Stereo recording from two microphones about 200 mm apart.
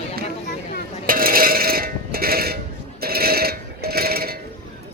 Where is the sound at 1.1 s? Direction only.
45° right (ahead or behind).